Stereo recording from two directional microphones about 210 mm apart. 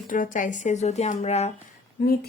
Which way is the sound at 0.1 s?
40° left (ahead or behind).